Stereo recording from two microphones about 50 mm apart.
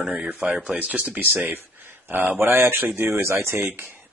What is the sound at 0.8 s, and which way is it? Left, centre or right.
Speech, right.